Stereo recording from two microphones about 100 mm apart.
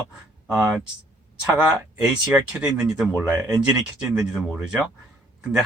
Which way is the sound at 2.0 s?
10° right (ahead or behind).